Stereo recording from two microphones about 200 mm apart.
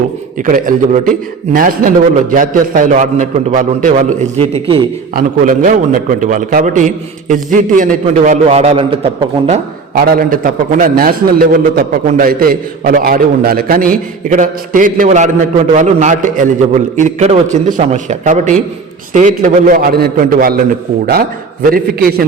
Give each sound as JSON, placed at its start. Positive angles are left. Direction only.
{"t": 0.4, "sound": "a man's voice", "side_deg": -40}
{"t": 9.5, "sound": "a man's voice", "side_deg": -45}